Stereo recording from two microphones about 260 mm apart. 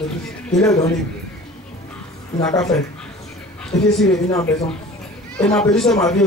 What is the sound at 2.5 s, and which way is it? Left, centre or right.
A woman's voice, centre.